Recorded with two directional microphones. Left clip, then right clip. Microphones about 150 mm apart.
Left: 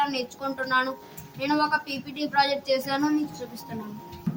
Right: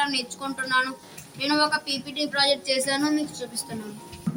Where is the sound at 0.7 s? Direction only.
20° left (ahead or behind).